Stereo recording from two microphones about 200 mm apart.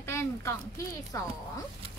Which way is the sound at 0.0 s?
15° left (ahead or behind).